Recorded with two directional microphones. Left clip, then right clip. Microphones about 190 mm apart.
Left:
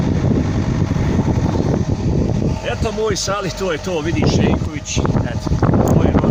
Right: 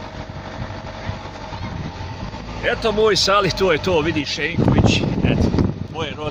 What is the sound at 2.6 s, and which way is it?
Speech, 20° right (ahead or behind).